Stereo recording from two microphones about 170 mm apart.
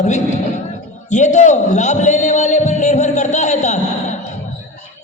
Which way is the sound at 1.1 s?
45° left (ahead or behind).